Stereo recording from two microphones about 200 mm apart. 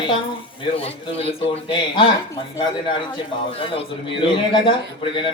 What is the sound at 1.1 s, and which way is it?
Speech, 30° left (ahead or behind).